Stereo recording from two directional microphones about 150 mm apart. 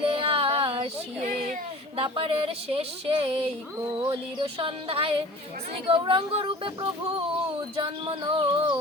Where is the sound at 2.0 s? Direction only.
40° right (ahead or behind).